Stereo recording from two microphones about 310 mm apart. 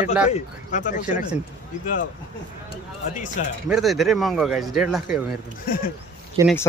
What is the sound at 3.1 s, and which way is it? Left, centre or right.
Speech, left.